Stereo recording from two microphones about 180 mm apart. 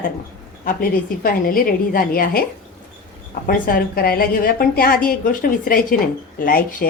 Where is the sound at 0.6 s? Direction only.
50° left (ahead or behind).